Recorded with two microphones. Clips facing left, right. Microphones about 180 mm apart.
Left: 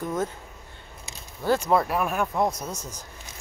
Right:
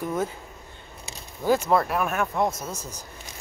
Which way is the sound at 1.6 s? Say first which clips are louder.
Even; centre (ahead or behind).